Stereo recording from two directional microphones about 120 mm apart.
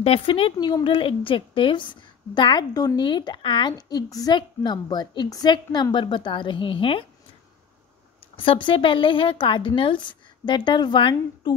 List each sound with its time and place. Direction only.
0.0 s a woman's voice: 50° left (ahead or behind)
8.2 s a woman's voice: 50° left (ahead or behind)